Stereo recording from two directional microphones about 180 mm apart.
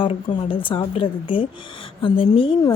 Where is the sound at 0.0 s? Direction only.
30° left (ahead or behind).